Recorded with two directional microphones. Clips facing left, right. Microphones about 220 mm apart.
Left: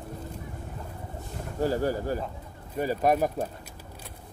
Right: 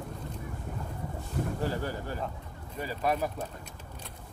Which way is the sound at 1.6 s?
40° left (ahead or behind).